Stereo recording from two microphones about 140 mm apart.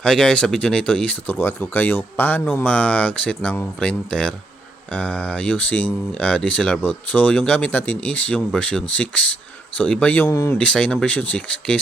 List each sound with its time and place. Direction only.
0.0 s speech: 5° left (ahead or behind)
10.2 s speech: 25° left (ahead or behind)
10.6 s speech: 5° left (ahead or behind)